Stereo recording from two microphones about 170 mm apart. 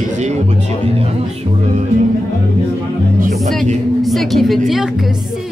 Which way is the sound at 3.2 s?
55° right (ahead or behind).